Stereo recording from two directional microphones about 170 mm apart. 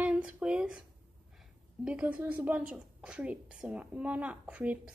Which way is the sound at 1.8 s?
10° right (ahead or behind).